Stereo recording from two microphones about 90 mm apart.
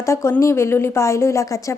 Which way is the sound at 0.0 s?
35° left (ahead or behind).